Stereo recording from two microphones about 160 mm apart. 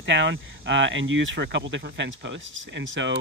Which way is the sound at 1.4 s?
90° right.